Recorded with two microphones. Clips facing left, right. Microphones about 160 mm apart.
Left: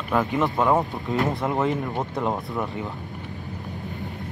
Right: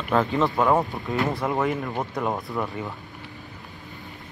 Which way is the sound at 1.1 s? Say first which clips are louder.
Left 1 dB; 20° left (ahead or behind).